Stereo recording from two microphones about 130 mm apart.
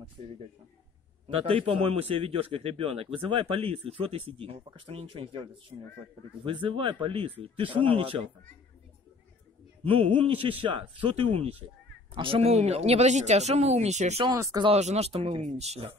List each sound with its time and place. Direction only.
0.2 s a man's voice: 55° right (ahead or behind)
9.8 s a man's voice: 45° right (ahead or behind); by 14.2 s 60° right (ahead or behind)
14.2 s speech: 30° right (ahead or behind)
14.8 s speech: 60° right (ahead or behind)